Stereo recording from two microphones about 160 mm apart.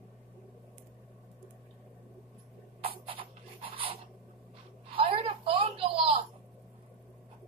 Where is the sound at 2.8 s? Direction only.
35° right (ahead or behind).